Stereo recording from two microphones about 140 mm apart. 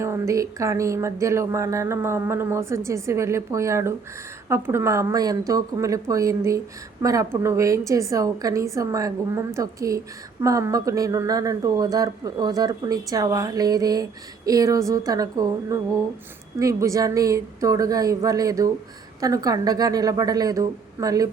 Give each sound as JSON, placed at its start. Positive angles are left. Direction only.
{"t": 0.0, "sound": "speech", "side_deg": -20}